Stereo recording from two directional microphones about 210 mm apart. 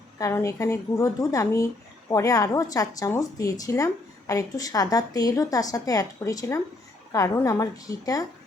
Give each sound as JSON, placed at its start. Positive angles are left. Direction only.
{"t": 0.2, "sound": "a woman's voice", "side_deg": 15}